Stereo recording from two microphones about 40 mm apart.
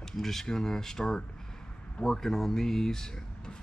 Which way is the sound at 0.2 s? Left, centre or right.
Centre.